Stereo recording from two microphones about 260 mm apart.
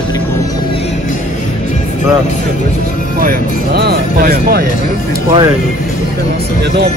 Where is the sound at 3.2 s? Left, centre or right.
Right.